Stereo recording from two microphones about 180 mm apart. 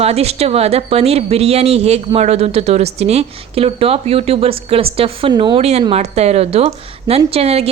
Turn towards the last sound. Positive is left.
turn(degrees=-35)  # may be behind; listen again after turning